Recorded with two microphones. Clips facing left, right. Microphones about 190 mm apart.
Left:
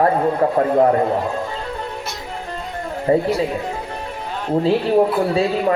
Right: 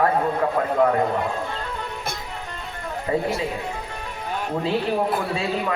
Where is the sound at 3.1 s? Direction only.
35° left (ahead or behind).